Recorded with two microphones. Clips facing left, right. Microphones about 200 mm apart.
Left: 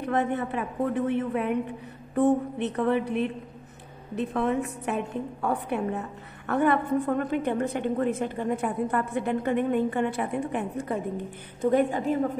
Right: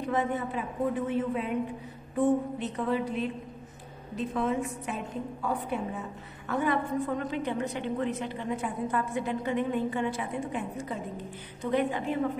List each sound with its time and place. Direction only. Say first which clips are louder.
0.0 s a woman's voice: left 3 dB; 65° left (ahead or behind)
11.6 s a woman's voice: left 5 dB; 45° left (ahead or behind)